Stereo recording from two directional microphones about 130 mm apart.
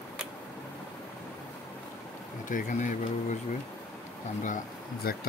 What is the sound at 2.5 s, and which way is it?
Speech, 85° left.